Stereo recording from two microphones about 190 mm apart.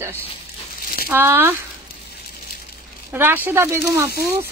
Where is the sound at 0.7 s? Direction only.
50° left (ahead or behind).